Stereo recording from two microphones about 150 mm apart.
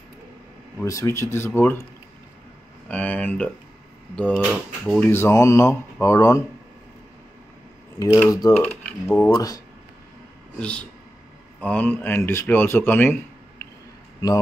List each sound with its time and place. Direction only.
0.7 s speech: 20° left (ahead or behind)
2.9 s speech: 10° left (ahead or behind)
5.1 s speech: 20° left (ahead or behind)
8.3 s speech: 20° left (ahead or behind)
8.5 s speech: 10° left (ahead or behind)
9.3 s speech: 25° left (ahead or behind)
10.6 s speech: 5° left (ahead or behind)